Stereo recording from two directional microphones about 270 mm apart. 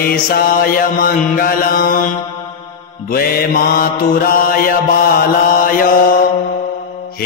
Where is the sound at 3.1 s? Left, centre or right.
Left.